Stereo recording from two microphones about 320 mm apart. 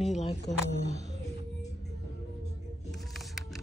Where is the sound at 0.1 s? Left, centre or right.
Centre.